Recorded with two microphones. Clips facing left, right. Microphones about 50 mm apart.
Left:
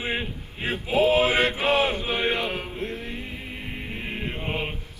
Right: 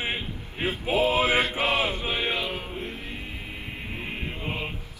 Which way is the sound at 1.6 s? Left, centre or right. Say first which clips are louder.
Left 3 dB; left.